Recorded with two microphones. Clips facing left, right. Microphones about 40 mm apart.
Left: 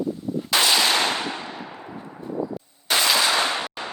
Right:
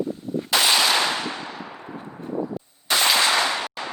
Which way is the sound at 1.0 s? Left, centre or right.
Left.